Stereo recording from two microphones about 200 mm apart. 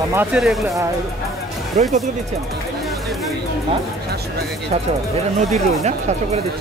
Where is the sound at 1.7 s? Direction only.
35° right (ahead or behind).